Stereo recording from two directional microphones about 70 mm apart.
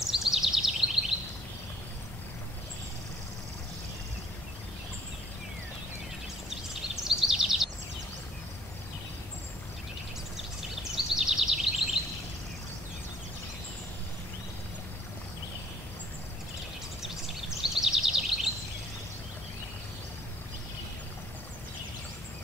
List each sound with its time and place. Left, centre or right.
0.1 s bird vocalization: centre
7.1 s bird vocalization: centre
10.3 s a sound: centre
17.6 s bird vocalization: centre